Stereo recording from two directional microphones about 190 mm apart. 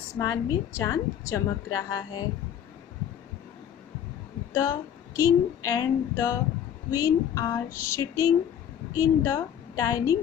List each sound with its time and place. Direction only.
0.2 s a woman's voice: 15° left (ahead or behind)
4.6 s a woman's voice: 15° left (ahead or behind)